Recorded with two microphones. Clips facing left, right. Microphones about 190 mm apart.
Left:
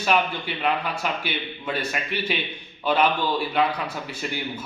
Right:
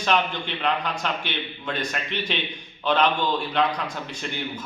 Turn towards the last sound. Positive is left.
turn(degrees=5)  # may be behind; listen again after turning